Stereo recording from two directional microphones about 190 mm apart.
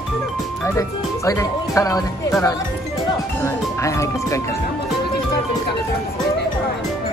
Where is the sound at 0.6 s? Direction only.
15° left (ahead or behind).